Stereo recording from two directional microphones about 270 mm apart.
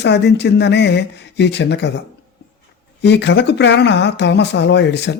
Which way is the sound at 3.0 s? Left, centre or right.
Left.